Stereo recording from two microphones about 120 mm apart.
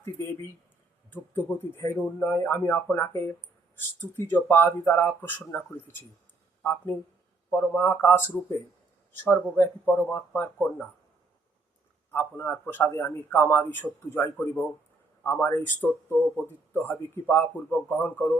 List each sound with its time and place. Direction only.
0.0 s speech: 20° left (ahead or behind)
12.1 s speech: 20° left (ahead or behind)